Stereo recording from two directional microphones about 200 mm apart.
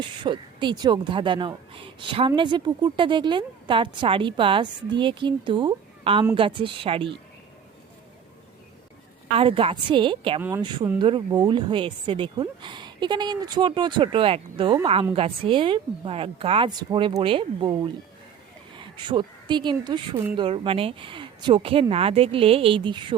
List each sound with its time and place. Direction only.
0.0 s a woman's voice: 25° right (ahead or behind)
9.4 s a woman's voice: 30° right (ahead or behind)